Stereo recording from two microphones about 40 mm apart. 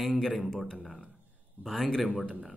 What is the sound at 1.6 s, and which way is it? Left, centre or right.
Speech, centre.